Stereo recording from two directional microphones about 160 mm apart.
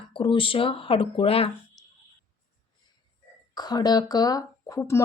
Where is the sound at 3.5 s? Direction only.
25° left (ahead or behind).